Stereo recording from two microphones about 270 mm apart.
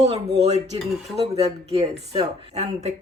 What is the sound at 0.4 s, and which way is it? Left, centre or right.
Speech, right.